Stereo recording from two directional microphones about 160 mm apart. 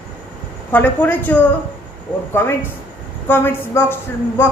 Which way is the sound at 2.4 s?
15° left (ahead or behind).